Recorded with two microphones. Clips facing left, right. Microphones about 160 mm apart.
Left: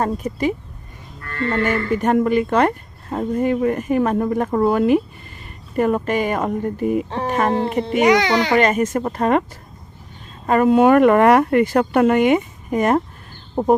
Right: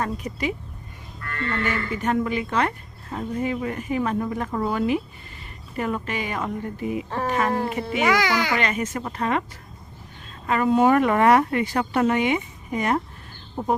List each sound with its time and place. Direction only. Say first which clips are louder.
0.0 s speech: left 6 dB; 45° left (ahead or behind)
8.0 s a child's voice: left 6 dB; 20° left (ahead or behind)
8.5 s speech: left 9 dB; 45° left (ahead or behind)
10.4 s speech: left 5 dB; 45° left (ahead or behind)